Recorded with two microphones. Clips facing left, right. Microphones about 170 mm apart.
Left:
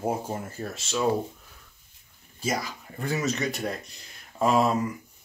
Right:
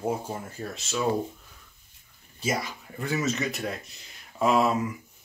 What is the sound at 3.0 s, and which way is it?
Speech, centre (ahead or behind).